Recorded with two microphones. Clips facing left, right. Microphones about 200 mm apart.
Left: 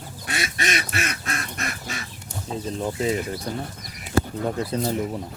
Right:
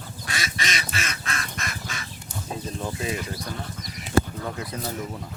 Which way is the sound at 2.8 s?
25° left (ahead or behind).